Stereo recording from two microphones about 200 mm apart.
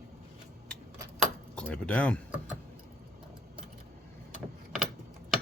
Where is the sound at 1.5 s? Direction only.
5° left (ahead or behind).